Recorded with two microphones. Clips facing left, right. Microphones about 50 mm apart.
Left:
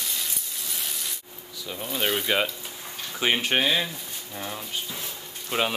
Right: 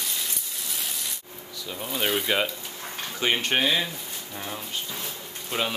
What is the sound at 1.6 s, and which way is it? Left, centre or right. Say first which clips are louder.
Speech: even; centre.